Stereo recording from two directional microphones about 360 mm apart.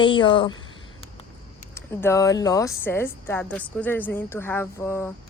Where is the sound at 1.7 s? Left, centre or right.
Centre.